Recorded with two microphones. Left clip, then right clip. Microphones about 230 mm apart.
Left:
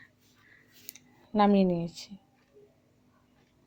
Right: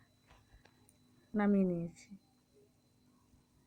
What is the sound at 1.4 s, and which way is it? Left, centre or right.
Speech, centre.